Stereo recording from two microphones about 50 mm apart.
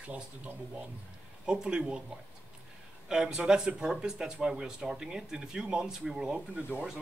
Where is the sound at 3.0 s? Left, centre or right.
Centre.